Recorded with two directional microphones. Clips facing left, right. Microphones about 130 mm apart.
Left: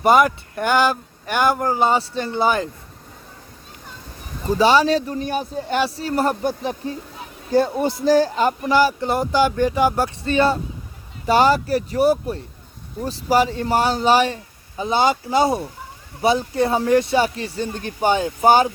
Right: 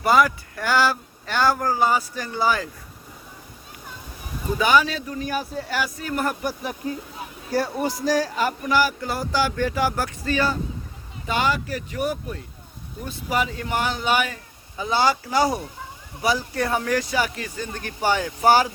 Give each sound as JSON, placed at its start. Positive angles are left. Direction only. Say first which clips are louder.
{"t": 0.0, "sound": "speech", "louder": "left 3 dB", "side_deg": 20}
{"t": 4.5, "sound": "speech", "louder": "left 5 dB", "side_deg": 30}
{"t": 11.3, "sound": "speech", "louder": "left 8 dB", "side_deg": 35}
{"t": 14.8, "sound": "speech", "louder": "left 3 dB", "side_deg": 20}